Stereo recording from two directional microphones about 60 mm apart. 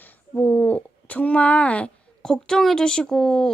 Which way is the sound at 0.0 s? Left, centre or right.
Left.